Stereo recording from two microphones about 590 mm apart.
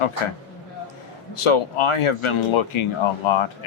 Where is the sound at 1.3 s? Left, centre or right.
Left.